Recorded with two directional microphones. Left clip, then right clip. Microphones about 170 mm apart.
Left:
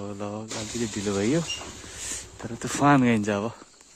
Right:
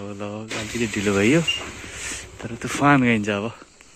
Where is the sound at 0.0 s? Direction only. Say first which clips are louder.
Right 2 dB; 25° left (ahead or behind).